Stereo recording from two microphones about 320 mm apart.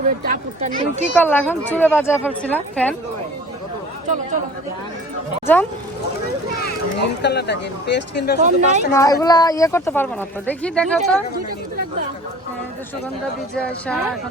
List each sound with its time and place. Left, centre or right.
0.3 s speech: right
1.2 s a woman's voice: centre
7.0 s speech: left
8.4 s speech: right
8.9 s speech: centre
13.8 s a woman's voice: centre